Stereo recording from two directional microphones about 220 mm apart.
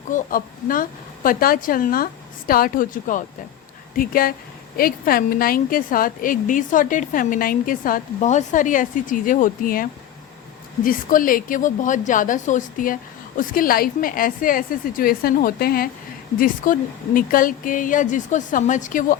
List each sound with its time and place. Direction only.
0.1 s a woman's voice: 40° left (ahead or behind)